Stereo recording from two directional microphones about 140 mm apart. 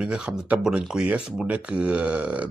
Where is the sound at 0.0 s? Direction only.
5° right (ahead or behind).